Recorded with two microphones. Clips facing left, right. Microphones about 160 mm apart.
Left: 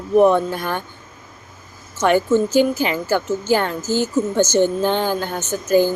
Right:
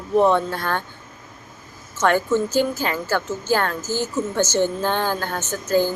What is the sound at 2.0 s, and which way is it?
A woman's voice, 15° left (ahead or behind).